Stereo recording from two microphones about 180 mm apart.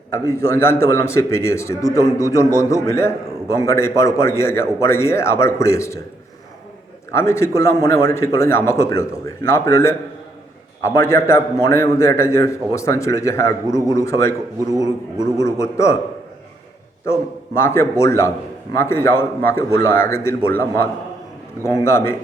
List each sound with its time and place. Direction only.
0.1 s a man's voice: 15° left (ahead or behind)
7.1 s a man's voice: 15° left (ahead or behind)
15.4 s a man's voice: 15° left (ahead or behind)
17.1 s a man's voice: 15° left (ahead or behind)